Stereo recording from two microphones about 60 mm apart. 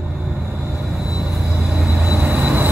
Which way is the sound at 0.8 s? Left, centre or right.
Centre.